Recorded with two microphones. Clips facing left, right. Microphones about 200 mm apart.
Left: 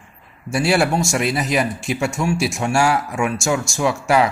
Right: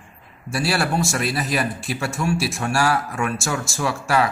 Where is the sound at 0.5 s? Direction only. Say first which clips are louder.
Left 5 dB; 20° left (ahead or behind).